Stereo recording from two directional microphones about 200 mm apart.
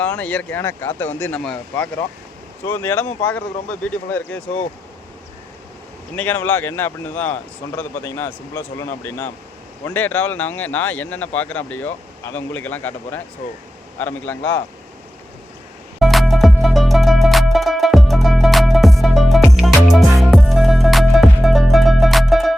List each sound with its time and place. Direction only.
0.0 s speech: 5° left (ahead or behind)
6.1 s speech: 10° left (ahead or behind)
16.0 s music: centre (ahead or behind)